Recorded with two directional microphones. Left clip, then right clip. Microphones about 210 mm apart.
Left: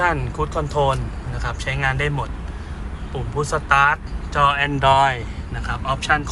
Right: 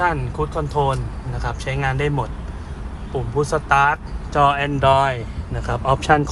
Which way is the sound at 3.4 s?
30° right (ahead or behind).